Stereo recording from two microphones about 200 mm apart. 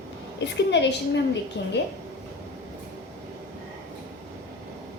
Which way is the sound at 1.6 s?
60° left (ahead or behind).